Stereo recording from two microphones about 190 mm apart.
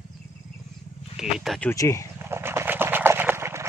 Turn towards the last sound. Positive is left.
turn(degrees=-15)  # may be behind; listen again after turning